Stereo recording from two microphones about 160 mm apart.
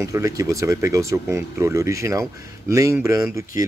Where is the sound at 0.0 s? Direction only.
20° right (ahead or behind).